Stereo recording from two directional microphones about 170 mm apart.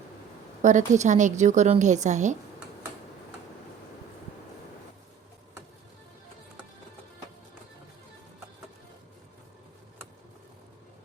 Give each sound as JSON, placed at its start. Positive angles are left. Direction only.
{"t": 0.6, "sound": "a woman's voice", "side_deg": -45}